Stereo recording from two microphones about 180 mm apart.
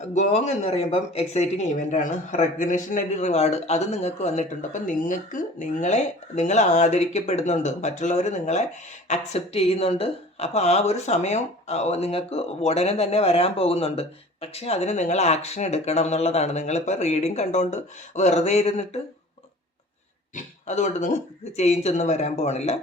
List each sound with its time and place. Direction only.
0.1 s a woman's voice: 40° left (ahead or behind)
20.3 s a woman's voice: 40° left (ahead or behind)